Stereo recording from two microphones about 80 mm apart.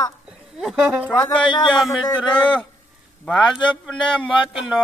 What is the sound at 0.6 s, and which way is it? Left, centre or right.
Speech, centre.